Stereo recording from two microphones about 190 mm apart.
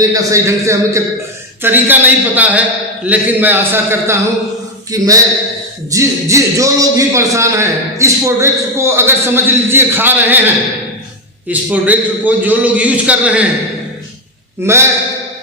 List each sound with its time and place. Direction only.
0.0 s a man's voice: 20° right (ahead or behind)
14.6 s a man's voice: 15° right (ahead or behind)